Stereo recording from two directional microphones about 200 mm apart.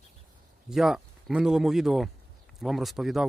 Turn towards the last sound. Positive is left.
turn(degrees=0)  # may be behind; listen again after turning